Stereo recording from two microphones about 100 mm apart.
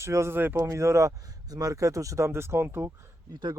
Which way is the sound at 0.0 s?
25° right (ahead or behind).